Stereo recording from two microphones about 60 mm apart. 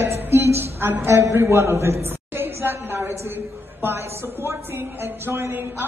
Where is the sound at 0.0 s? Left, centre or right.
Right.